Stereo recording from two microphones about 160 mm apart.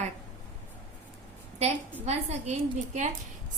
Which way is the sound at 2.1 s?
45° right (ahead or behind).